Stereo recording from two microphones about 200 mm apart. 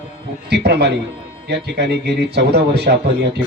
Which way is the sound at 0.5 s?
55° right (ahead or behind).